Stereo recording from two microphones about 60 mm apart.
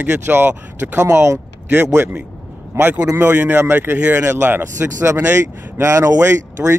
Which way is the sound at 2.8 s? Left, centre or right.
Right.